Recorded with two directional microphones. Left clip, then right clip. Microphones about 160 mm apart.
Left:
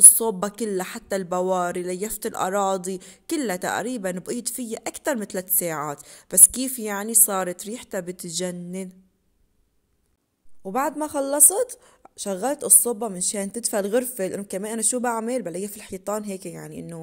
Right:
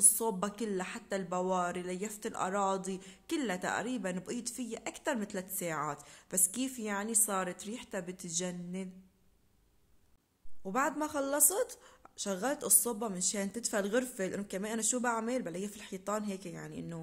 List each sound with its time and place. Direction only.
0.1 s a woman's voice: 45° left (ahead or behind)
10.6 s a woman's voice: 25° left (ahead or behind)